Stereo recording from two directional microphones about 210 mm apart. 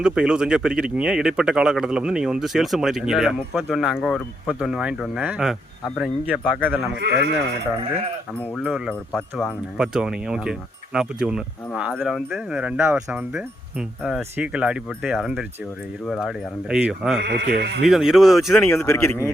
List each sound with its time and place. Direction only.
0.0 s speech: 5° right (ahead or behind)
7.0 s speech: 50° right (ahead or behind)
8.5 s speech: 5° right (ahead or behind)
17.2 s speech: 55° right (ahead or behind)
17.8 s speech: centre (ahead or behind)
18.7 s speech: 10° left (ahead or behind)